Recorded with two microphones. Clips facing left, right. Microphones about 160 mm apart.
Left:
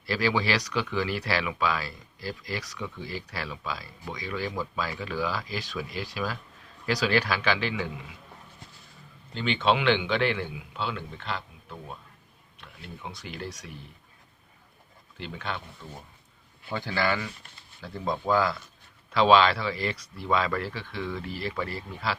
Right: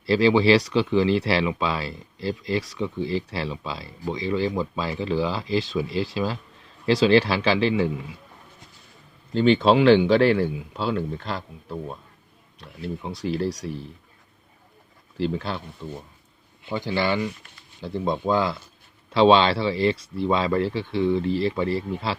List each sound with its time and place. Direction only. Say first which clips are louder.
0.0 s speech: right 9 dB; 25° right (ahead or behind)
9.3 s speech: right 8 dB; 35° right (ahead or behind)
15.2 s speech: right 9 dB; 35° right (ahead or behind)
16.6 s speech: right 4 dB; 20° right (ahead or behind)